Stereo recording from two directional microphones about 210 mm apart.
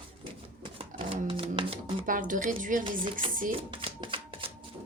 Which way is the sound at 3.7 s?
25° right (ahead or behind).